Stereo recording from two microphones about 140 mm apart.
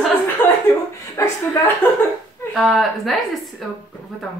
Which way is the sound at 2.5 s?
Centre (ahead or behind).